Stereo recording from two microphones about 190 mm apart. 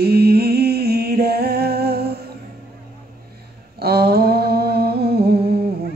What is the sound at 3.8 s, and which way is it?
Humming, 55° right (ahead or behind).